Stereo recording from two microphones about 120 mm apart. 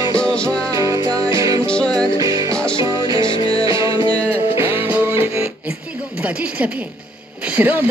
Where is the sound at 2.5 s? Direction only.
10° left (ahead or behind).